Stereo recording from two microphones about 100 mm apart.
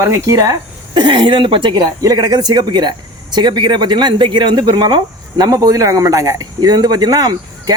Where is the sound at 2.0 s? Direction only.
40° right (ahead or behind).